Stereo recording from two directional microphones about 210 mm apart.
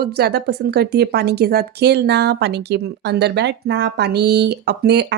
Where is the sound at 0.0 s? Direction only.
50° right (ahead or behind).